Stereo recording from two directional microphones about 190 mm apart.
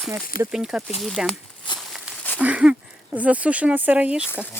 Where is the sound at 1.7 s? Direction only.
25° left (ahead or behind).